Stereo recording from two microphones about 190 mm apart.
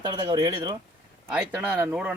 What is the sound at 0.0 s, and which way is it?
Speech, 25° right (ahead or behind).